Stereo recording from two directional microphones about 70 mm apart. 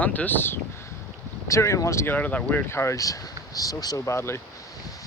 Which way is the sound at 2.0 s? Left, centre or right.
Left.